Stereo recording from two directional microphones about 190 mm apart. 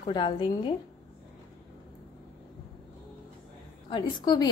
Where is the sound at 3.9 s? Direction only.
25° left (ahead or behind).